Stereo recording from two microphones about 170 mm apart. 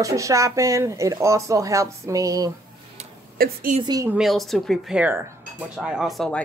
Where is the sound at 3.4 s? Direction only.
60° right (ahead or behind).